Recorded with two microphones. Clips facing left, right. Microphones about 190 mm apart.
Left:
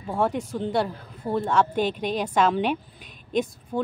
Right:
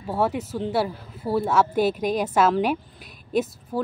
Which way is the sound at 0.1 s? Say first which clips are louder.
Right 1 dB; 5° right (ahead or behind).